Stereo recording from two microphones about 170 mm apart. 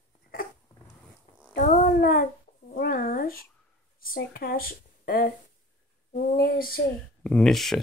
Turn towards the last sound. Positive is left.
turn(degrees=0)  # may be behind; listen again after turning